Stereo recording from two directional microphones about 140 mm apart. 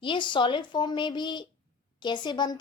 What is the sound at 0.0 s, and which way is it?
Speech, 35° left (ahead or behind).